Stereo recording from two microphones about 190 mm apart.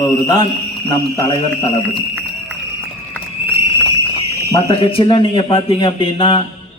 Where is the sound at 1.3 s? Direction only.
30° left (ahead or behind).